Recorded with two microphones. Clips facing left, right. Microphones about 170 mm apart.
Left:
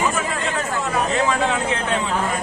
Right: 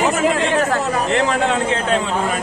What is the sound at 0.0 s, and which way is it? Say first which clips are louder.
Chatter: right 6 dB; 75° right (ahead or behind).